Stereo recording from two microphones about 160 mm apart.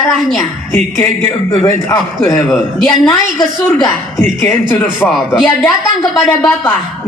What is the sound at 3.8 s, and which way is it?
A woman's voice, 15° left (ahead or behind).